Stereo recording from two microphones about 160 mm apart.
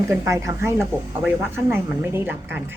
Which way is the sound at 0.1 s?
20° right (ahead or behind).